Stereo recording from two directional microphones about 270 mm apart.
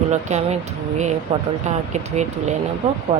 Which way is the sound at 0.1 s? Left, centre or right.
Right.